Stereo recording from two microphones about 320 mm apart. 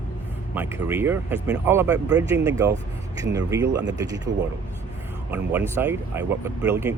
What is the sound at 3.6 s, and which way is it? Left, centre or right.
Speech, right.